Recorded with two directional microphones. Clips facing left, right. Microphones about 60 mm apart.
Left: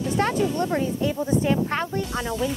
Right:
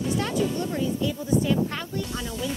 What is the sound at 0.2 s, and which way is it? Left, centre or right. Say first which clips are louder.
Speech: left 4 dB; left.